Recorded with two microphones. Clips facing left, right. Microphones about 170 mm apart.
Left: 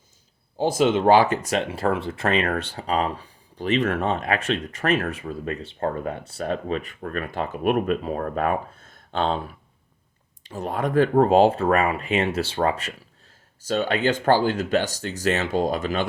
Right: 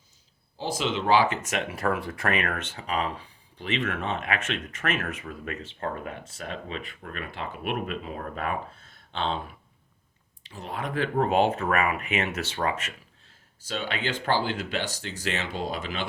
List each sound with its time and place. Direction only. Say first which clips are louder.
0.5 s speech: left 9 dB; 50° left (ahead or behind)
10.4 s speech: left 8 dB; 45° left (ahead or behind)